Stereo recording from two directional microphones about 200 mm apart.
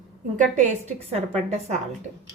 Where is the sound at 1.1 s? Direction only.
30° right (ahead or behind).